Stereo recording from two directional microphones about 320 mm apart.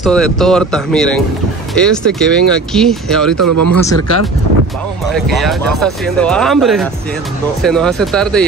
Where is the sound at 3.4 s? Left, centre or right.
Right.